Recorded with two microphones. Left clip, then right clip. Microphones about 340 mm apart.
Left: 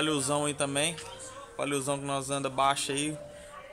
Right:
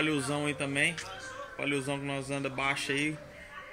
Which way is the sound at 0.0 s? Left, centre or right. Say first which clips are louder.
Left 2 dB; centre.